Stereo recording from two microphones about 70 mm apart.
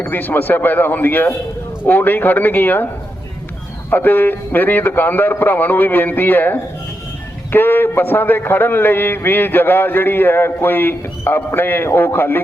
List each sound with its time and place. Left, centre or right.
0.0 s a man's voice: left
3.8 s a man's voice: left